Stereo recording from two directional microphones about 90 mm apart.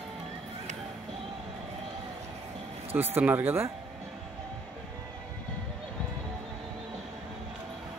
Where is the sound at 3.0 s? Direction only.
20° right (ahead or behind).